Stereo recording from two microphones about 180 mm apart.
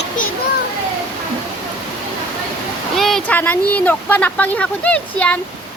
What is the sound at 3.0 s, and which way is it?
Speech, centre (ahead or behind).